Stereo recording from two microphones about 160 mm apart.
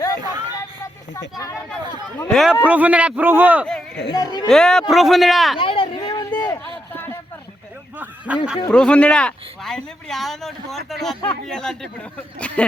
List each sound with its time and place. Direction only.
0.3 s music: 25° right (ahead or behind)
2.3 s a man's voice: 5° right (ahead or behind)
4.1 s speech: 25° left (ahead or behind)
4.4 s speech: 5° left (ahead or behind)
5.5 s a sound: 35° left (ahead or behind)
6.4 s a sound: 15° left (ahead or behind)
8.3 s a man's voice: 10° right (ahead or behind)
8.7 s speech: 5° left (ahead or behind)